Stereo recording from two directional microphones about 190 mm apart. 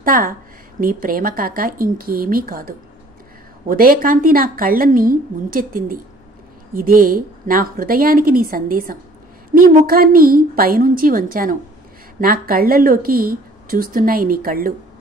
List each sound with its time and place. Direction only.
0.0 s a woman's voice: 45° right (ahead or behind)